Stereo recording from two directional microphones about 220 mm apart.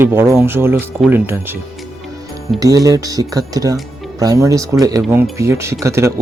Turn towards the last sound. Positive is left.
turn(degrees=-15)  # may be behind; listen again after turning